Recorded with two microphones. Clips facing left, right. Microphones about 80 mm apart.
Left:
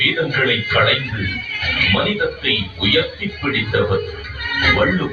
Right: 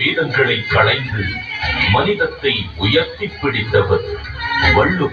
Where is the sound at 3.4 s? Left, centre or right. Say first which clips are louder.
Right 3 dB; right.